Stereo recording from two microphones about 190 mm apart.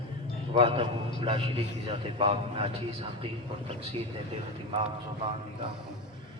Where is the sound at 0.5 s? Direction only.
30° right (ahead or behind).